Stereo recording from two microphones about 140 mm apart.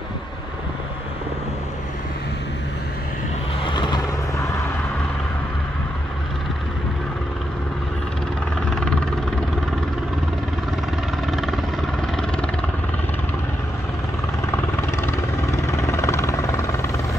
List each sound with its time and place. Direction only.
3.6 s vehicle: 35° left (ahead or behind)
8.6 s vehicle: 5° left (ahead or behind)
11.3 s vehicle: centre (ahead or behind)
14.4 s vehicle: 20° left (ahead or behind)